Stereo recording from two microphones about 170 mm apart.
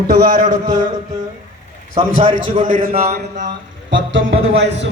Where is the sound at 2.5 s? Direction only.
50° right (ahead or behind).